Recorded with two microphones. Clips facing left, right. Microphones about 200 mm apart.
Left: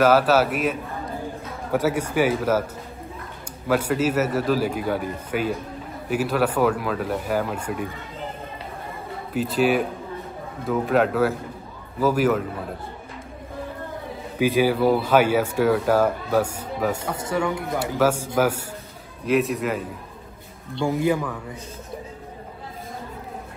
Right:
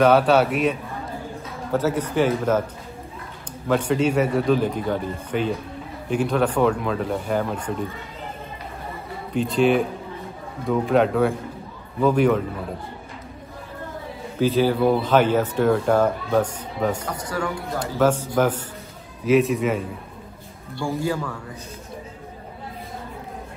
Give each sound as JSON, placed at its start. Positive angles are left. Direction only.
{"t": 0.0, "sound": "speech", "side_deg": 5}
{"t": 3.6, "sound": "speech", "side_deg": 5}
{"t": 9.3, "sound": "speech", "side_deg": 5}
{"t": 14.4, "sound": "speech", "side_deg": 10}
{"t": 17.1, "sound": "a man's voice", "side_deg": 25}
{"t": 17.7, "sound": "speech", "side_deg": 10}
{"t": 20.7, "sound": "a man's voice", "side_deg": 20}